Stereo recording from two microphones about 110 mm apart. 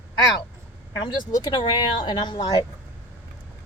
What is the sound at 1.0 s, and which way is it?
Speech, 40° left (ahead or behind).